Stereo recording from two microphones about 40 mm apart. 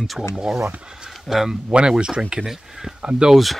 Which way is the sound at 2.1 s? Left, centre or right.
Right.